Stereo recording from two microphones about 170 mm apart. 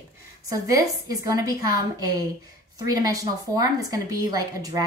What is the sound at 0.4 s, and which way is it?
Speech, 20° right (ahead or behind).